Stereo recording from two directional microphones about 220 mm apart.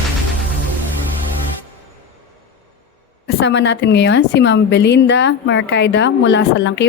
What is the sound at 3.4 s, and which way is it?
A woman's voice, 50° left (ahead or behind).